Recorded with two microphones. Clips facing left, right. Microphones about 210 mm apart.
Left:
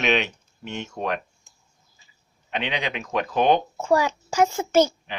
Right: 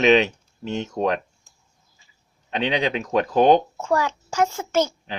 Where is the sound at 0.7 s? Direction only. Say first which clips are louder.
Right 5 dB; 35° right (ahead or behind).